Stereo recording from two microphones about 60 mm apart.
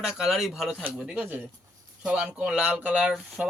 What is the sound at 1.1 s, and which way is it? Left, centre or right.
Speech, right.